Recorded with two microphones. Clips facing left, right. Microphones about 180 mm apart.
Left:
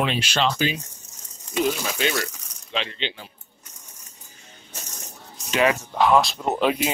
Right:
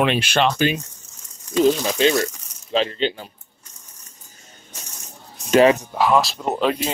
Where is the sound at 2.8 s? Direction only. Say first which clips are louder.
Right 9 dB; 40° right (ahead or behind).